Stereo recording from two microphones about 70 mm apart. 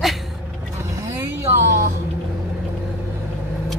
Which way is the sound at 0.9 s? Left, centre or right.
Right.